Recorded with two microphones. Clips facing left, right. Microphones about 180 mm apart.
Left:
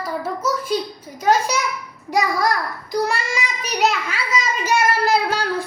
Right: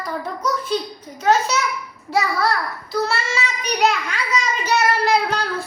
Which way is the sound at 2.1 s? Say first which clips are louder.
Left 1 dB; 15° left (ahead or behind).